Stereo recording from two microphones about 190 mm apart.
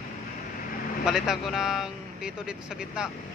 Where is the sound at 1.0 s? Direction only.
Centre (ahead or behind).